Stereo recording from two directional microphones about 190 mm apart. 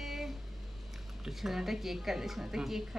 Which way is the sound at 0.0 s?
Centre (ahead or behind).